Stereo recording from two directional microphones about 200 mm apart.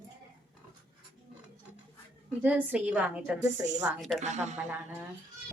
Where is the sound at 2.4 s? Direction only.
10° right (ahead or behind).